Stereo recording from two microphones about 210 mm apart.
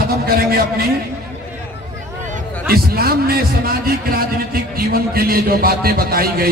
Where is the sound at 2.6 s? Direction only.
45° right (ahead or behind).